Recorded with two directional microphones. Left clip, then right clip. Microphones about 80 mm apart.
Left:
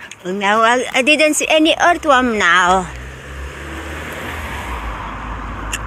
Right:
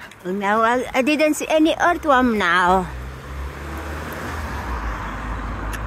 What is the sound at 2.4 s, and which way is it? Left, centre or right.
Speech, right.